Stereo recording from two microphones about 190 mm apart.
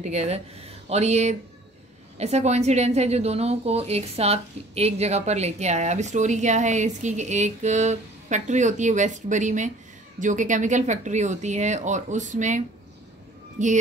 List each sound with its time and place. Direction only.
0.0 s a woman's voice: 35° right (ahead or behind)